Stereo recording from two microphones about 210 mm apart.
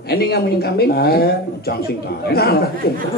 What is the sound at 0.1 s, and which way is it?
A man's voice, 50° left (ahead or behind).